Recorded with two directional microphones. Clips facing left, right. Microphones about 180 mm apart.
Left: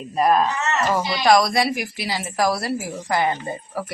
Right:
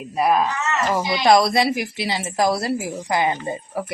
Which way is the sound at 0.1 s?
10° right (ahead or behind).